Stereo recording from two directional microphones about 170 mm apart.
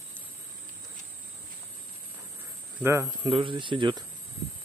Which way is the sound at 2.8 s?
15° right (ahead or behind).